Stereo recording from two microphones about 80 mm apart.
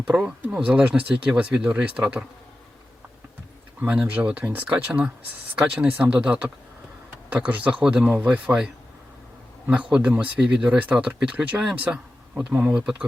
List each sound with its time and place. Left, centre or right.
0.0 s speech: centre
3.8 s speech: centre